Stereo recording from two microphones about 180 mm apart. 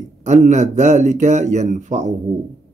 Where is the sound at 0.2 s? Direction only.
40° right (ahead or behind).